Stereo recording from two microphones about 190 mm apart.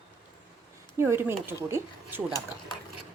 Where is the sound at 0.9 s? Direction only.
10° right (ahead or behind).